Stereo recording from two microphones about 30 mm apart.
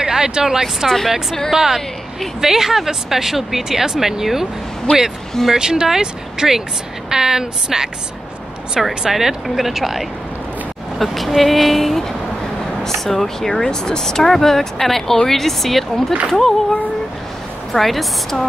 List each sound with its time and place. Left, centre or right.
0.0 s speech: right
4.9 s speech: left
5.5 s a woman's voice: right
8.8 s a woman's voice: centre
13.5 s speech: left
17.7 s a woman's voice: centre